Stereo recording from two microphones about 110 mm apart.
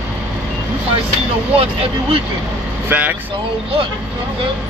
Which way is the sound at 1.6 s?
60° right (ahead or behind).